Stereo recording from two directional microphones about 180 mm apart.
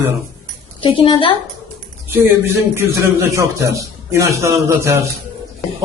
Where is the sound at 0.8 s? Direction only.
30° left (ahead or behind).